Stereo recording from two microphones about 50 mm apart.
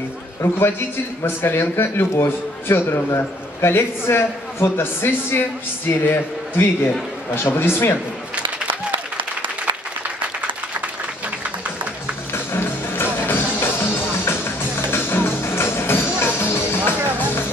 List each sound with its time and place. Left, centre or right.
0.6 s a man's voice: left
12.3 s music: left